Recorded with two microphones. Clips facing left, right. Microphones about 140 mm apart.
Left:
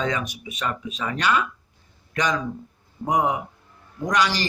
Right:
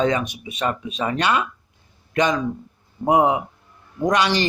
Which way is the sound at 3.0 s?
25° right (ahead or behind).